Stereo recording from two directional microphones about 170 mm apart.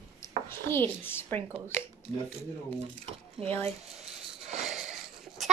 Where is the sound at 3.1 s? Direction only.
35° right (ahead or behind).